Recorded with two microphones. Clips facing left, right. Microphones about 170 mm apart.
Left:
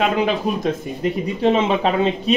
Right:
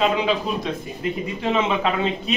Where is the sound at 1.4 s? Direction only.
35° left (ahead or behind).